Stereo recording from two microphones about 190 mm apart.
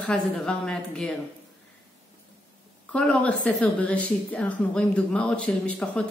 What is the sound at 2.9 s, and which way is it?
A woman's voice, 5° left (ahead or behind).